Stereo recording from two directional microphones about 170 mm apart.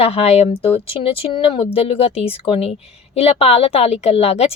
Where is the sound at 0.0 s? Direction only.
35° left (ahead or behind).